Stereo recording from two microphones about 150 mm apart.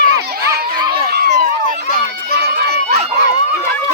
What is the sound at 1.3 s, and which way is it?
Run, 55° right (ahead or behind).